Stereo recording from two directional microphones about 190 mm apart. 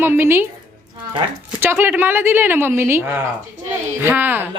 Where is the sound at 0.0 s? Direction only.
10° right (ahead or behind).